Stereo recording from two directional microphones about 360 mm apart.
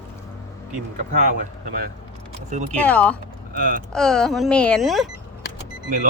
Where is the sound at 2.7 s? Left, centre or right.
Centre.